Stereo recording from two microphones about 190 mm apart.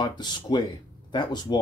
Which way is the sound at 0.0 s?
25° left (ahead or behind).